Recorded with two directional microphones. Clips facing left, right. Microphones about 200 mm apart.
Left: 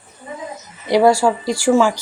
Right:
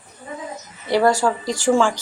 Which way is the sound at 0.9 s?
10° left (ahead or behind).